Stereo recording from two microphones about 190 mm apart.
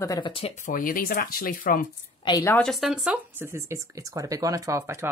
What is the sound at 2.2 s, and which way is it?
Speech, 20° left (ahead or behind).